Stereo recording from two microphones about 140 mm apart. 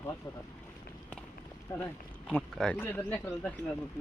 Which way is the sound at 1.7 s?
20° left (ahead or behind).